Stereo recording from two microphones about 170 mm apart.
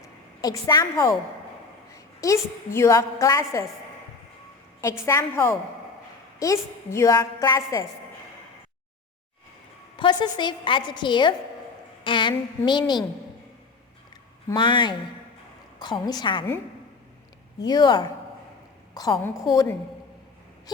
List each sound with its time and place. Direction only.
0.4 s a woman's voice: 20° left (ahead or behind)
4.8 s a woman's voice: 15° left (ahead or behind)
10.0 s a woman's voice: 25° left (ahead or behind)
14.5 s a woman's voice: 30° left (ahead or behind)
17.7 s a woman's voice: 25° left (ahead or behind)